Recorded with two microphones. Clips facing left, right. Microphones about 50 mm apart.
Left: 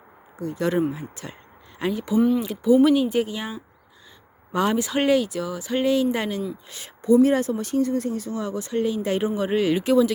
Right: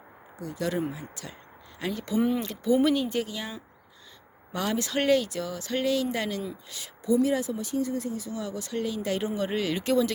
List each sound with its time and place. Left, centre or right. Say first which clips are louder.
0.3 s speech: left 6 dB; left
1.9 s speech: left 6 dB; centre
2.1 s speech: left 6 dB; centre
2.4 s speech: left 6 dB; centre
4.8 s speech: even; centre
6.7 s speech: left 7 dB; left
8.3 s speech: left 6 dB; left
9.3 s speech: left 6 dB; centre